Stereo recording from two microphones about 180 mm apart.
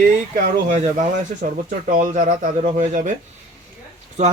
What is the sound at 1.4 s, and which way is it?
Speech, 50° right (ahead or behind).